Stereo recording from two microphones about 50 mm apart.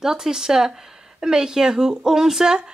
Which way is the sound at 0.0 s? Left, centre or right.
Centre.